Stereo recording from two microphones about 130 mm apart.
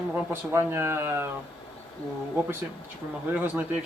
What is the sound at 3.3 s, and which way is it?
Speech, 15° right (ahead or behind).